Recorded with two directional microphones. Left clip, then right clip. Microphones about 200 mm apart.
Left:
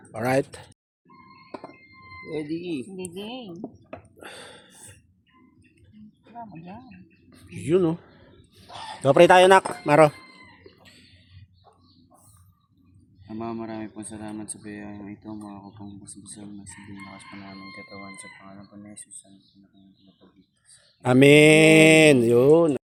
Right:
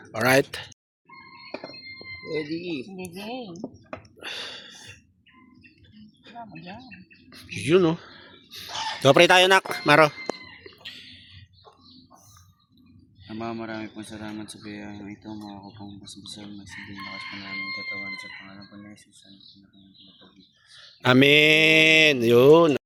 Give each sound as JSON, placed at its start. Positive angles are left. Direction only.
{"t": 0.1, "sound": "speech", "side_deg": 0}
{"t": 2.2, "sound": "speech", "side_deg": 45}
{"t": 3.2, "sound": "speech", "side_deg": -25}
{"t": 4.2, "sound": "gasp", "side_deg": 15}
{"t": 6.2, "sound": "speech", "side_deg": 5}
{"t": 9.0, "sound": "speech", "side_deg": -10}
{"t": 10.8, "sound": "a sound", "side_deg": 5}
{"t": 13.2, "sound": "speech", "side_deg": 0}
{"t": 18.2, "sound": "speech", "side_deg": 5}
{"t": 20.7, "sound": "speech", "side_deg": 0}